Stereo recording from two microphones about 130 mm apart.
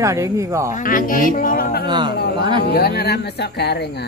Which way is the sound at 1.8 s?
35° right (ahead or behind).